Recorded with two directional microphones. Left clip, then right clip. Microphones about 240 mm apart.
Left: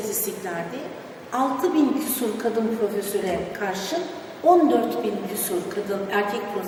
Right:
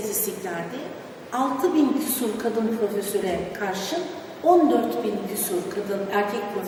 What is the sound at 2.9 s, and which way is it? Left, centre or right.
A woman's voice, centre.